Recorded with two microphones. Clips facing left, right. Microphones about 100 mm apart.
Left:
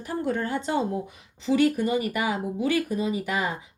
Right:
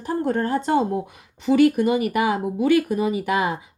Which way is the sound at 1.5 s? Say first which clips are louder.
Right 5 dB; 65° right (ahead or behind).